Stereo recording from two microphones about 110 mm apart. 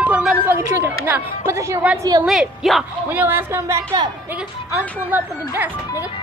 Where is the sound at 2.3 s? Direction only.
Centre (ahead or behind).